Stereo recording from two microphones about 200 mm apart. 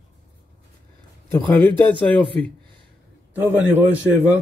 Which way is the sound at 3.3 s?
10° right (ahead or behind).